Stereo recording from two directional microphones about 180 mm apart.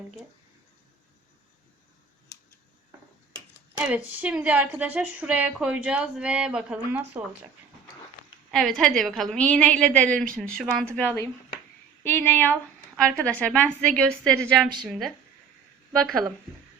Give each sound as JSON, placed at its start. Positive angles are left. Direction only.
{"t": 3.8, "sound": "a woman's voice", "side_deg": -10}
{"t": 8.4, "sound": "a woman's voice", "side_deg": 0}